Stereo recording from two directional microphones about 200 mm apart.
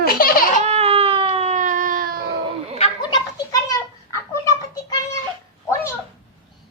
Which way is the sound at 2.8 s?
20° left (ahead or behind).